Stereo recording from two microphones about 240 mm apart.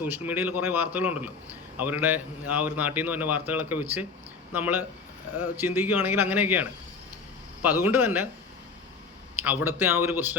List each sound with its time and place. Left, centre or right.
0.0 s a man's voice: centre
9.4 s a man's voice: centre